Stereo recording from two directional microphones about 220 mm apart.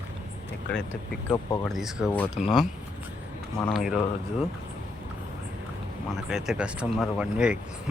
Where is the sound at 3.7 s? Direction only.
Centre (ahead or behind).